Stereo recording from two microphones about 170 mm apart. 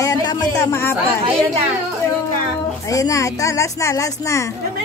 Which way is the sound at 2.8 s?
20° left (ahead or behind).